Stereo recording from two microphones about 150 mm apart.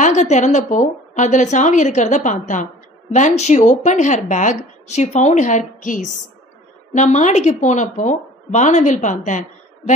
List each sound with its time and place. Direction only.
0.0 s a woman's voice: 50° left (ahead or behind)